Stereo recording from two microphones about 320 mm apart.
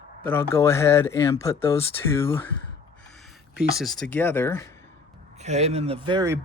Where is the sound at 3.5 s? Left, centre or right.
Centre.